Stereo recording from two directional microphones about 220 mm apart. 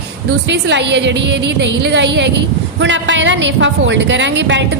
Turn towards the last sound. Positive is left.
turn(degrees=-55)  # may be behind; listen again after turning